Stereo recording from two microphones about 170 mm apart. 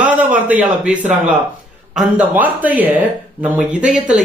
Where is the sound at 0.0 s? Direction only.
10° right (ahead or behind).